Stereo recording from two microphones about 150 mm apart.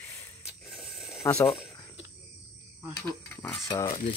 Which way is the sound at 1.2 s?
15° left (ahead or behind).